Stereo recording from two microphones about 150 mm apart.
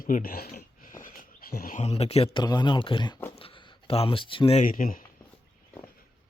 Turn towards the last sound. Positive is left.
turn(degrees=65)  # may be behind; listen again after turning